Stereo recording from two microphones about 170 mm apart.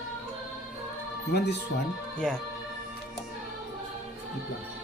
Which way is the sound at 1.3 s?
90° left.